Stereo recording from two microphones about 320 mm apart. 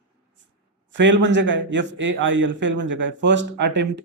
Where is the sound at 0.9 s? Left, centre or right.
Right.